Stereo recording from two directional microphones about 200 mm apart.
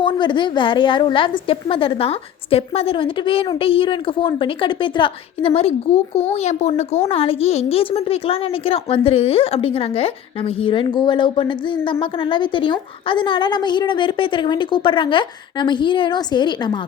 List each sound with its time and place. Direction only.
0.0 s a woman's voice: 25° left (ahead or behind)